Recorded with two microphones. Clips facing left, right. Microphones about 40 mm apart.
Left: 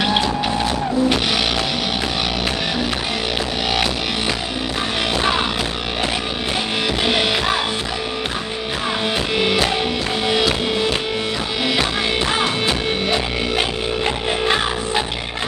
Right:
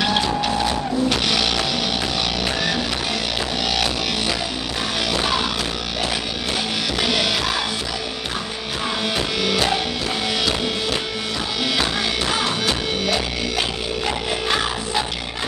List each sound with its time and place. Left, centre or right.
0.0 s music: centre
0.4 s vehicle: centre
1.0 s music: centre
7.0 s music: left
9.4 s music: left
11.6 s music: centre